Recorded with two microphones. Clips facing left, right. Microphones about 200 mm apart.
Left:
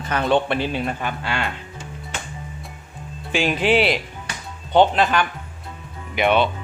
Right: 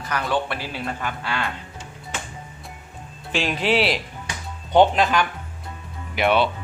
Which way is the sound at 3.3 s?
Centre (ahead or behind).